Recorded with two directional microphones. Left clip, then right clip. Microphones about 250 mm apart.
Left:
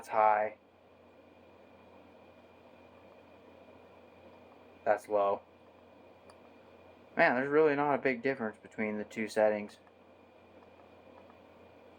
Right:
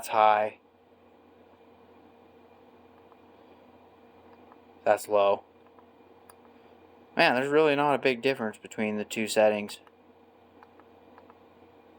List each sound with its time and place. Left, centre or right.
0.0 s speech: right
4.8 s speech: right
7.2 s speech: right